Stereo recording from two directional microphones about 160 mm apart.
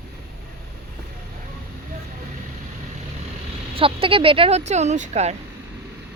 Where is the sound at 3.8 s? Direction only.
35° right (ahead or behind).